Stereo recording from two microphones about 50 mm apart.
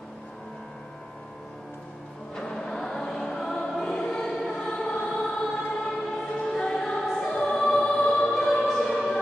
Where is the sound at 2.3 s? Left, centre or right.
Centre.